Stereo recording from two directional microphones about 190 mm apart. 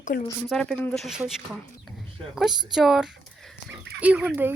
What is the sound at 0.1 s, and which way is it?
Speech, 50° left (ahead or behind).